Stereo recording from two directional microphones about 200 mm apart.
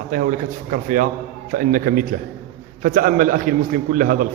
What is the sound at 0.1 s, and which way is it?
A man's voice, 45° right (ahead or behind).